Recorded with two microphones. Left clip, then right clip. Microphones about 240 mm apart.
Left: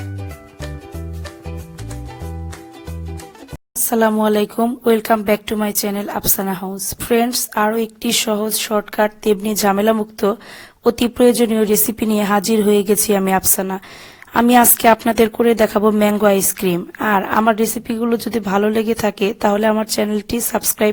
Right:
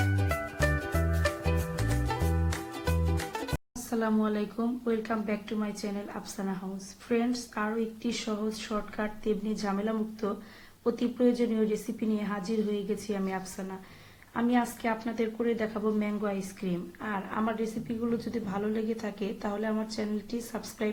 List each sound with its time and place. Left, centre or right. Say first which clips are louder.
0.6 s music: right 1 dB; centre
3.8 s a woman's voice: left 15 dB; left